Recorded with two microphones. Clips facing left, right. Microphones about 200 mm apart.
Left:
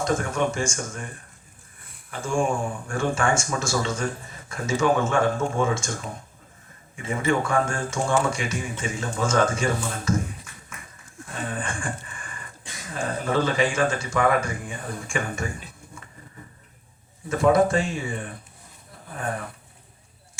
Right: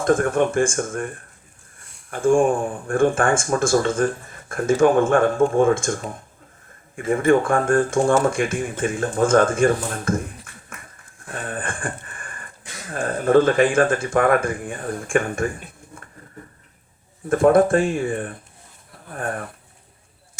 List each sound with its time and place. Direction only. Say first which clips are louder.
0.0 s speech: right 6 dB; 55° right (ahead or behind)
1.8 s a sound: even; centre (ahead or behind)
2.0 s speech: right 8 dB; 50° right (ahead or behind)
17.2 s speech: right 4 dB; 55° right (ahead or behind)